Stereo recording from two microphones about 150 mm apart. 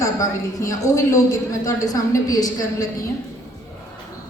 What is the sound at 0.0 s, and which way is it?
A woman's voice, 20° left (ahead or behind).